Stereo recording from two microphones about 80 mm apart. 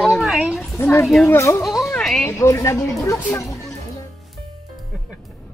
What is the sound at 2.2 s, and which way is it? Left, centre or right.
Speech, left.